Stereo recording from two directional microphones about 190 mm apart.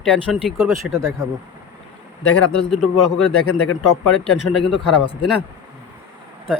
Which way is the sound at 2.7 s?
Centre (ahead or behind).